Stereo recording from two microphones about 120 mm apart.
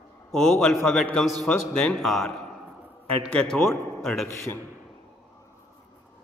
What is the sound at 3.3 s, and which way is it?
Speech, 15° left (ahead or behind).